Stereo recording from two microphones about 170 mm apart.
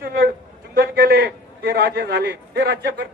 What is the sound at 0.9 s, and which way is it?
A man's voice, 60° right (ahead or behind).